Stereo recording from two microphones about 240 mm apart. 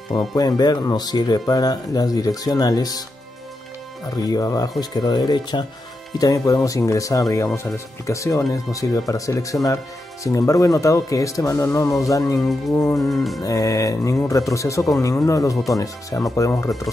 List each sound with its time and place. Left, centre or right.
0.1 s speech: centre
4.1 s speech: centre
12.4 s speech: centre
12.7 s speech: centre
13.1 s speech: centre
13.4 s speech: centre